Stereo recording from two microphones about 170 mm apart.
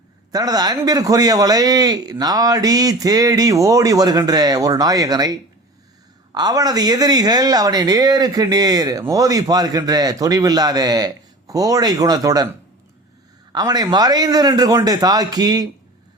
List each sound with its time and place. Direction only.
0.3 s speech: 20° right (ahead or behind)
13.5 s speech: 25° right (ahead or behind)